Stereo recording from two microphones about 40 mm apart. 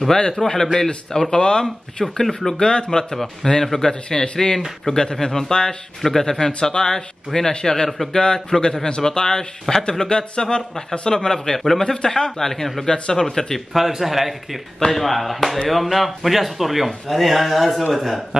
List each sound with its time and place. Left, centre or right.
0.4 s a man's voice: centre
1.3 s a man's voice: left
1.6 s a man's voice: centre
2.5 s a man's voice: left
13.7 s speech: centre